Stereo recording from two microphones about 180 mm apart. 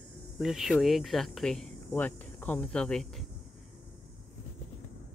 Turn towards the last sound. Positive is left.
turn(degrees=0)  # may be behind; listen again after turning